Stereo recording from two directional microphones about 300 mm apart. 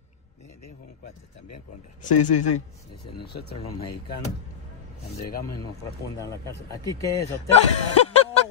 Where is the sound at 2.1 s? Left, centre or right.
Left.